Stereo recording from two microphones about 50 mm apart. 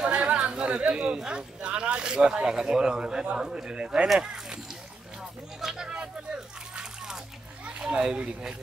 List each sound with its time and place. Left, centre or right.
0.0 s speech: right
5.6 s a sound: centre
7.6 s speech: right